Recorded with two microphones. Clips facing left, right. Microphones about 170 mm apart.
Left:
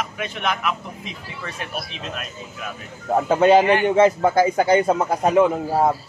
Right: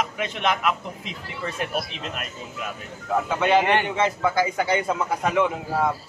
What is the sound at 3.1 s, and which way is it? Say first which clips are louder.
A man's voice: left 6 dB; 40° left (ahead or behind).